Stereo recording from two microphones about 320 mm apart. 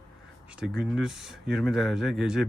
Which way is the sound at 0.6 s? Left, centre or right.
Centre.